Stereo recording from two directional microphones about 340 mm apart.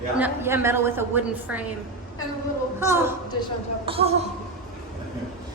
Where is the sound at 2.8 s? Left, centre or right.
Centre.